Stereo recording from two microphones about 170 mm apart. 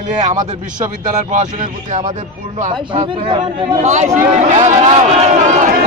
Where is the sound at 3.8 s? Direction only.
45° right (ahead or behind).